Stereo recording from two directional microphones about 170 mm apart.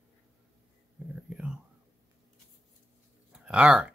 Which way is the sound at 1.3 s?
5° right (ahead or behind).